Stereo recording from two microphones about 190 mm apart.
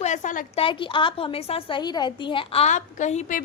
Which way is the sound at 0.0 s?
40° left (ahead or behind).